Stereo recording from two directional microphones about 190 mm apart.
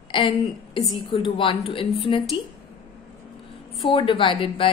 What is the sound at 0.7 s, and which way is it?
A woman's voice, 25° left (ahead or behind).